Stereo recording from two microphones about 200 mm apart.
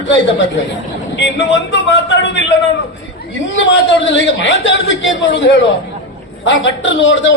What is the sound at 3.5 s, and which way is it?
A man's voice, 65° left (ahead or behind).